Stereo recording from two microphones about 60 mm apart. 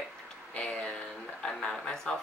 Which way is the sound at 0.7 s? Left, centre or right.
Centre.